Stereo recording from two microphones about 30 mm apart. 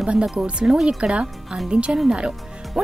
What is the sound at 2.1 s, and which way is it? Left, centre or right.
Music, right.